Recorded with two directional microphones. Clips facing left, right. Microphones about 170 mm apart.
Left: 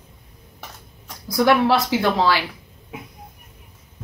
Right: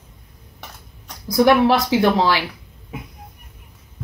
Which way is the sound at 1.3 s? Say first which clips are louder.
Right 3 dB; 15° right (ahead or behind).